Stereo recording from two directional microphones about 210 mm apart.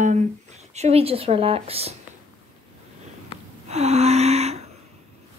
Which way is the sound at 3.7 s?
30° right (ahead or behind).